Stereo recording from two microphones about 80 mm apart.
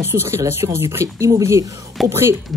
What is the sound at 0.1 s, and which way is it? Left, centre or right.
Speech, right.